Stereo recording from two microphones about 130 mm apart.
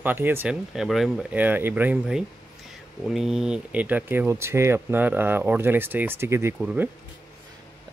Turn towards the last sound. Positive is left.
turn(degrees=-15)  # may be behind; listen again after turning